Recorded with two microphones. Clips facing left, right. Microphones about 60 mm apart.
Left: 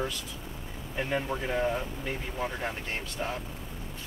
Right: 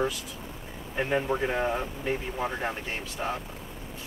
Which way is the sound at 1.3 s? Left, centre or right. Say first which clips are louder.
Right 2 dB; right.